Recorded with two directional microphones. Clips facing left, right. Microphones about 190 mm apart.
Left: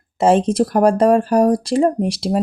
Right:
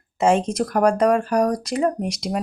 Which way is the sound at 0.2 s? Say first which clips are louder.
Left 4 dB; 30° left (ahead or behind).